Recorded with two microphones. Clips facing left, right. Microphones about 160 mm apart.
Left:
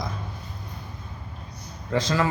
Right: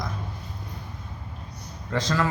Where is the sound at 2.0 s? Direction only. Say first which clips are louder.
Left 1 dB; 5° left (ahead or behind).